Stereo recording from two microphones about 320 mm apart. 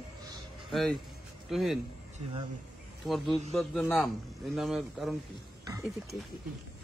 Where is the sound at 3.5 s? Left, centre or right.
Centre.